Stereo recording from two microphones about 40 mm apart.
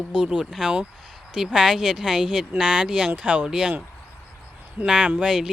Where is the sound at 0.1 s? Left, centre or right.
Right.